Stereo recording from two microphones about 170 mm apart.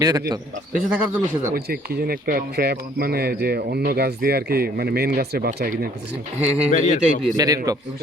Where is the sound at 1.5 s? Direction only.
65° right (ahead or behind).